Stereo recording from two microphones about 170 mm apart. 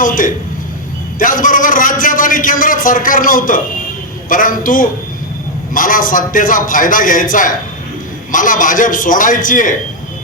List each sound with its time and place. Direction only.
0.0 s a man's voice: 50° left (ahead or behind)